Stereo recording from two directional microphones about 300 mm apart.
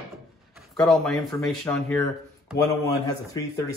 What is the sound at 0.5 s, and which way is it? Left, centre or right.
Speech, centre.